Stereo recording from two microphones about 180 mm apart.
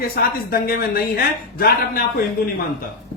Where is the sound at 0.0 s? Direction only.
55° left (ahead or behind).